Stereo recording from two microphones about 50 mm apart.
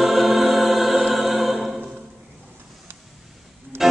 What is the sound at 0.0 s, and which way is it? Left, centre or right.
Music, centre.